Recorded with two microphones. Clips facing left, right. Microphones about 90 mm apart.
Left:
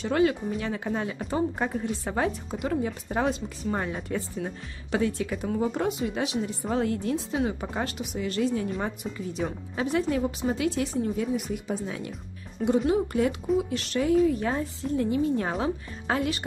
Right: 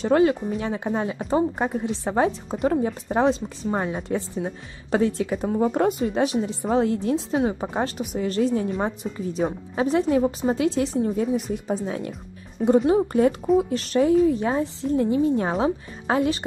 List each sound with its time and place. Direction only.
0.0 s a woman's voice: 30° right (ahead or behind)
2.5 s a woman's voice: 40° right (ahead or behind)
6.7 s a woman's voice: 25° right (ahead or behind)